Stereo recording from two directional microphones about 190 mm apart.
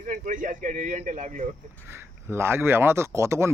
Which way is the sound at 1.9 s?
15° right (ahead or behind).